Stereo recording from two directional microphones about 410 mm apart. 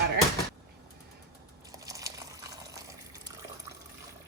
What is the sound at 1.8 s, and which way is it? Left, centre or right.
Water, centre.